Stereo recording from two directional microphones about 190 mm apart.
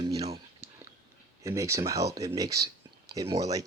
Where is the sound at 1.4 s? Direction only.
15° right (ahead or behind).